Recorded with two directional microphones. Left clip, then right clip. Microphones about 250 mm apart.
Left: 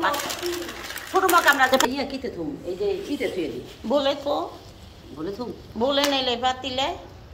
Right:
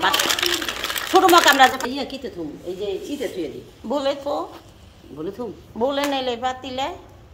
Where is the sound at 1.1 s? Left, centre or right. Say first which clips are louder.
Right 5 dB; right.